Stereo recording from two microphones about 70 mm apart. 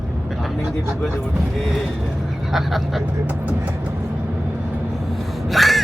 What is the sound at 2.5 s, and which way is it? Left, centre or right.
Speech, centre.